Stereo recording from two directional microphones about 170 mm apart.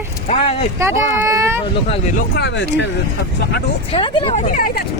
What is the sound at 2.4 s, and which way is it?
Speech, 90° left.